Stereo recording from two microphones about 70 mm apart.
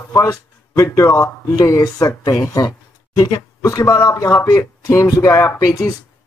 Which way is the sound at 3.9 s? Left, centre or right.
Left.